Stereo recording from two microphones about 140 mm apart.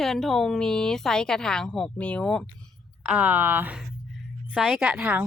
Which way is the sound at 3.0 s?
10° right (ahead or behind).